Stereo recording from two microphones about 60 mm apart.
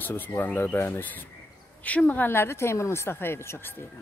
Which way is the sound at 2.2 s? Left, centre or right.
Left.